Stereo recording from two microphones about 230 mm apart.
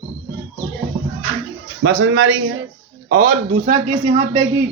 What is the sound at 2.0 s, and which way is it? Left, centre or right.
Speech, right.